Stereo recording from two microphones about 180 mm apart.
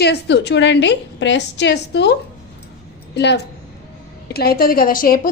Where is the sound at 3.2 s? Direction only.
70° left (ahead or behind).